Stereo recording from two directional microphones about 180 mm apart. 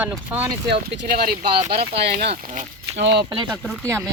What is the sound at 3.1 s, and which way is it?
Speech, 25° right (ahead or behind).